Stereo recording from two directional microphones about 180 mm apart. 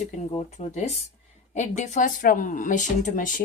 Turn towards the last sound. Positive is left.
turn(degrees=45)  # may be behind; listen again after turning